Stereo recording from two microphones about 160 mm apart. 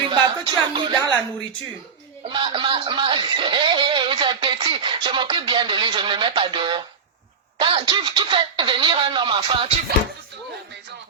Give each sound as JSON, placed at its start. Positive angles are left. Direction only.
{"t": 0.0, "sound": "speech", "side_deg": -30}
{"t": 2.3, "sound": "speech", "side_deg": -30}